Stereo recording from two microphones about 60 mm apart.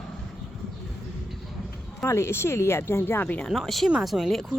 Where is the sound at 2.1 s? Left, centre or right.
Left.